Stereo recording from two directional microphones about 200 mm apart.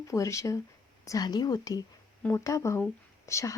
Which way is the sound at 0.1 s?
15° left (ahead or behind).